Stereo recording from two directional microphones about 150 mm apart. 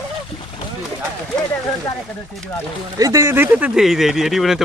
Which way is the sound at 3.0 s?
20° right (ahead or behind).